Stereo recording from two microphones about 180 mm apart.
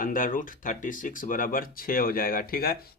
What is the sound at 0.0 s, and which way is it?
Speech, 50° left (ahead or behind).